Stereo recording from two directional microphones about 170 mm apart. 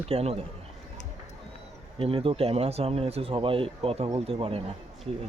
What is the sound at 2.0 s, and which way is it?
Speech, 35° right (ahead or behind).